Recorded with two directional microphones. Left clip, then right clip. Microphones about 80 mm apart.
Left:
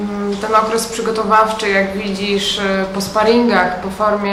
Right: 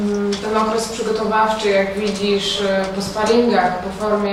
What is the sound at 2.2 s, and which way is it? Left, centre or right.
A woman's voice, left.